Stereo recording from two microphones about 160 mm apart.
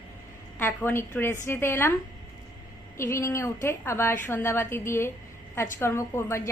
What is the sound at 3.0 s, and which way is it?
A woman's voice, 15° left (ahead or behind).